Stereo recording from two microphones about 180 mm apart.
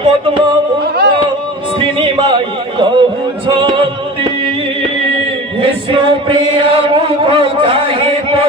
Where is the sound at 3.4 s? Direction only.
30° right (ahead or behind).